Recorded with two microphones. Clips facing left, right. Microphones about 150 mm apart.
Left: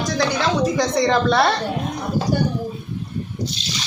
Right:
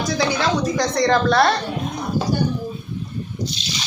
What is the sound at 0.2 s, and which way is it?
Speech, centre (ahead or behind).